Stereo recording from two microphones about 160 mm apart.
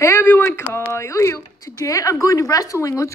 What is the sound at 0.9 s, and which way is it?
A woman's voice, 15° left (ahead or behind).